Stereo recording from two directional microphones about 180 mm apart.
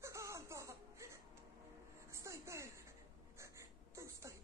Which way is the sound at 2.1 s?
15° right (ahead or behind).